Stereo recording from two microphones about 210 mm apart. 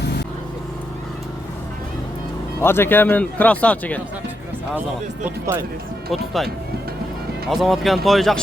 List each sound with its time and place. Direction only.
2.6 s speech: 10° left (ahead or behind)
5.2 s speech: 10° right (ahead or behind)
6.1 s speech: centre (ahead or behind)
7.5 s speech: centre (ahead or behind)